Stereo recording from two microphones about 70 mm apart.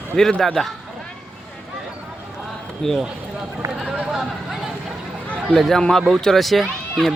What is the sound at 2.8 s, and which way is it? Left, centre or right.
Speech, centre.